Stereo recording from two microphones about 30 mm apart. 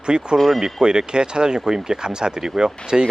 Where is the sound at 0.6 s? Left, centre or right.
Right.